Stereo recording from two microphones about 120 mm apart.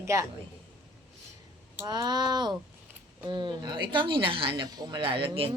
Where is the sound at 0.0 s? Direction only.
25° right (ahead or behind).